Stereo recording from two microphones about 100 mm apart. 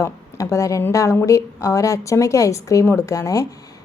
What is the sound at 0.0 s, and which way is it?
A woman's voice, 35° left (ahead or behind).